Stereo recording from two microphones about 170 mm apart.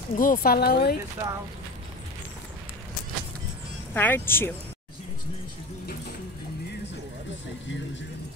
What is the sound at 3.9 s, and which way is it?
Speech, 10° left (ahead or behind).